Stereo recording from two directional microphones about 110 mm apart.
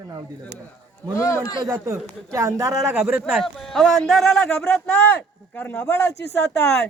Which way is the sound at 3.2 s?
Centre (ahead or behind).